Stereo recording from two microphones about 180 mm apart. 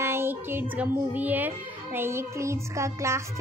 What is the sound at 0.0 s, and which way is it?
A child's voice, 15° right (ahead or behind).